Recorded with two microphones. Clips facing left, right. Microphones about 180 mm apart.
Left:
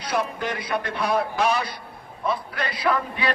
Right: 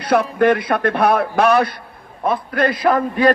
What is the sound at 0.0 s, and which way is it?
A man's voice, 60° right (ahead or behind).